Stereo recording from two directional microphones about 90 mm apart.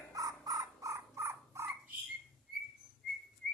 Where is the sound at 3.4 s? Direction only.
10° left (ahead or behind).